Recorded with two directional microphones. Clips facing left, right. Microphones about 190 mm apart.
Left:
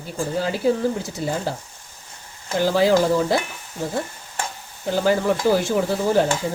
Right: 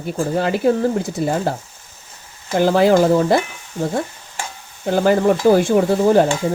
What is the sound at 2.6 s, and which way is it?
Speech, 55° right (ahead or behind).